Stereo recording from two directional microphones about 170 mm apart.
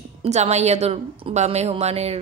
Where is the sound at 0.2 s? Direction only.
40° right (ahead or behind).